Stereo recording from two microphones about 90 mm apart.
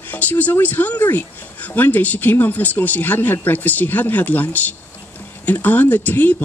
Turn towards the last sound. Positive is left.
turn(degrees=20)  # may be behind; listen again after turning